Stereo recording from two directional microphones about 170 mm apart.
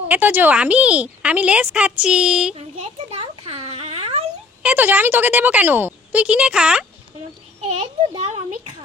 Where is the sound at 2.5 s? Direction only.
35° right (ahead or behind).